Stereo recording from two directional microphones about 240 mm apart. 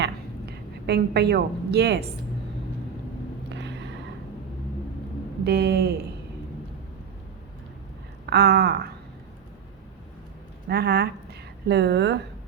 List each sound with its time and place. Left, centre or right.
0.9 s a woman's voice: right
3.5 s a sound: right
5.5 s speech: right
8.3 s speech: right
10.7 s a woman's voice: right